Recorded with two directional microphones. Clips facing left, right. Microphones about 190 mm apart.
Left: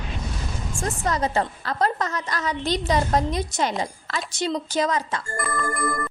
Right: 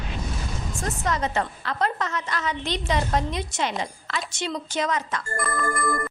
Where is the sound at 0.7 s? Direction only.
30° left (ahead or behind).